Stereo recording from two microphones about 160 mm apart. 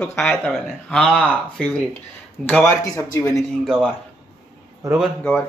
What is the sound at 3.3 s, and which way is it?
Speech, centre (ahead or behind).